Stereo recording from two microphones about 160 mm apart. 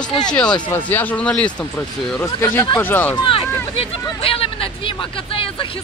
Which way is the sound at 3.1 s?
35° left (ahead or behind).